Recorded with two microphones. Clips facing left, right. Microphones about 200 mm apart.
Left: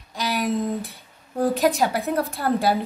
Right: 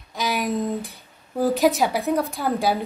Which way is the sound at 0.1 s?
Centre (ahead or behind).